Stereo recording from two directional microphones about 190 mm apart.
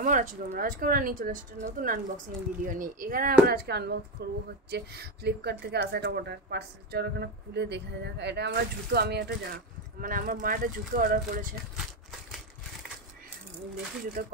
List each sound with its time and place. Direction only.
0.0 s speech: 45° right (ahead or behind)
11.7 s crumpling: centre (ahead or behind)
14.2 s speech: 50° right (ahead or behind)